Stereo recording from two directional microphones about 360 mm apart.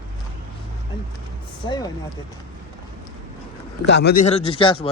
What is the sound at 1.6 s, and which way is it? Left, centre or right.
Speech, centre.